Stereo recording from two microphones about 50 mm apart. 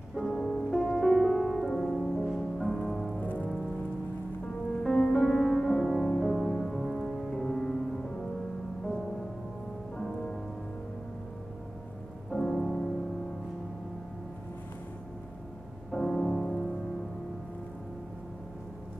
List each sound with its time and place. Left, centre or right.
0.2 s music: centre
0.7 s music: centre
3.2 s rain on surface: left
4.8 s music: centre
9.9 s music: centre
12.3 s music: centre
15.9 s music: centre